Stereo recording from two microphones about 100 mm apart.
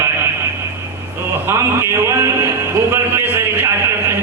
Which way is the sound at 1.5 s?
25° right (ahead or behind).